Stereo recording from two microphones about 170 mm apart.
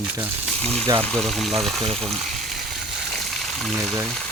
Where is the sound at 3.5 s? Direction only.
Centre (ahead or behind).